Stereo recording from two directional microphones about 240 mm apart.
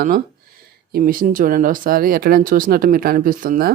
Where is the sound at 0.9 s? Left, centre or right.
Right.